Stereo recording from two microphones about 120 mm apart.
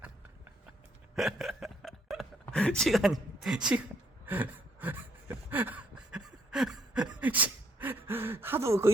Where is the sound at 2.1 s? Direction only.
Centre (ahead or behind).